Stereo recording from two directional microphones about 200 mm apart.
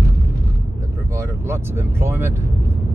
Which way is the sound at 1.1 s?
10° right (ahead or behind).